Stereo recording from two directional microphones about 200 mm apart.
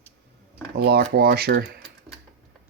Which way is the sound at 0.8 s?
50° right (ahead or behind).